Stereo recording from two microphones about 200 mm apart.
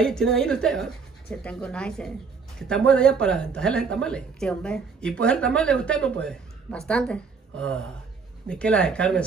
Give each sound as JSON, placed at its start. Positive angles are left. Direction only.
{"t": 0.0, "sound": "a woman's voice", "side_deg": 5}